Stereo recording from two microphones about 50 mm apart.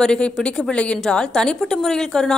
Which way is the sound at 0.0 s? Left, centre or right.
Centre.